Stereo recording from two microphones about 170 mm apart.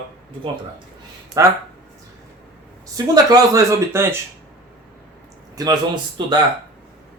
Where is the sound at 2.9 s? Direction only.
20° right (ahead or behind).